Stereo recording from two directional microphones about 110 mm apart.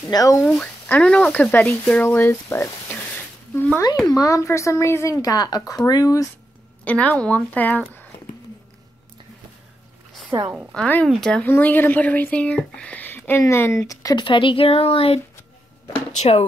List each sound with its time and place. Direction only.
0.1 s speech: 35° left (ahead or behind)
0.4 s speech: centre (ahead or behind)
0.8 s speech: 10° left (ahead or behind)
4.1 s speech: 30° left (ahead or behind)
6.8 s speech: 10° left (ahead or behind)
10.7 s speech: 10° left (ahead or behind)
11.4 s speech: 20° left (ahead or behind)
14.1 s speech: 50° left (ahead or behind)
16.1 s speech: 85° left